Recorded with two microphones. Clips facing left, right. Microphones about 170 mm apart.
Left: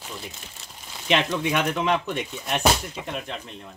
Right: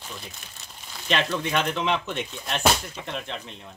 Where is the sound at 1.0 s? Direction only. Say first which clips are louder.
Left 3 dB; 15° left (ahead or behind).